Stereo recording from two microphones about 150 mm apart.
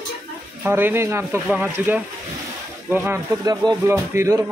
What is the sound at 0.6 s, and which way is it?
Speech, 15° right (ahead or behind).